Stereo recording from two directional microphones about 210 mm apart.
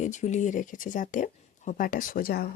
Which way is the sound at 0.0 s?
35° left (ahead or behind).